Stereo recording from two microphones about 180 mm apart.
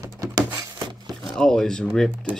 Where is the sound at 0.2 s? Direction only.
20° right (ahead or behind).